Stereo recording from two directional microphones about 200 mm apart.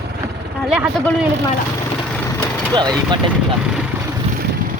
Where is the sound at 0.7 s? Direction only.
5° right (ahead or behind).